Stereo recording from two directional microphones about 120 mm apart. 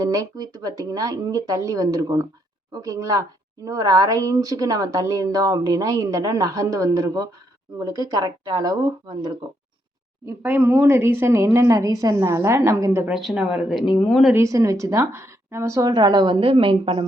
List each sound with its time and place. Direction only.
0.0 s a woman's voice: 30° right (ahead or behind)
10.2 s a woman's voice: 15° right (ahead or behind)
13.1 s speech: 5° right (ahead or behind)
14.3 s a woman's voice: 25° right (ahead or behind); by 17.0 s 50° right (ahead or behind)